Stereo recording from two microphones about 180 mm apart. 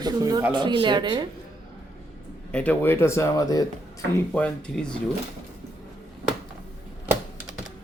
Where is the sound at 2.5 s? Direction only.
10° left (ahead or behind).